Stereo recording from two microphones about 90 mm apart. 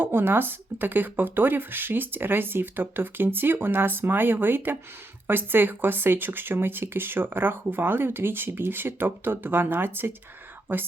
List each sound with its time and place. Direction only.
0.0 s speech: 25° right (ahead or behind)